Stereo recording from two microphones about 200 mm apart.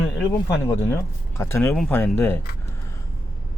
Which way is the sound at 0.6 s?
10° left (ahead or behind).